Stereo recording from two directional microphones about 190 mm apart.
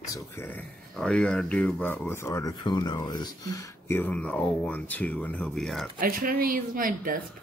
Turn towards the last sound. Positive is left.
turn(degrees=-45)  # may be behind; listen again after turning